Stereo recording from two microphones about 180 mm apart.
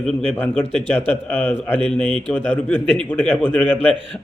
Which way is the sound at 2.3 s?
10° left (ahead or behind).